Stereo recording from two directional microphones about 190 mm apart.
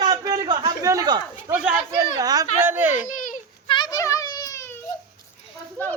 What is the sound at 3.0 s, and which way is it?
Baby cry, 45° left (ahead or behind).